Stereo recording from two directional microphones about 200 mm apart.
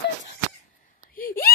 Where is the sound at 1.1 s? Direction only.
45° left (ahead or behind).